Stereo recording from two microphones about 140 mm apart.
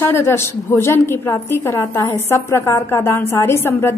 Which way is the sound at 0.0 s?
15° left (ahead or behind).